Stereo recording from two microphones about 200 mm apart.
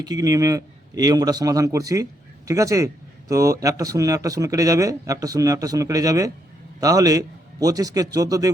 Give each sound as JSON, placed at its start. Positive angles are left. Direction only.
{"t": 0.0, "sound": "speech", "side_deg": -20}